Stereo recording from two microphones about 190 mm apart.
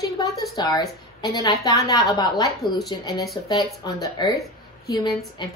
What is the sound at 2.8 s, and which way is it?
A woman's voice, 20° left (ahead or behind).